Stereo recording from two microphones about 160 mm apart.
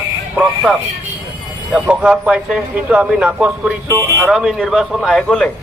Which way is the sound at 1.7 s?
5° right (ahead or behind).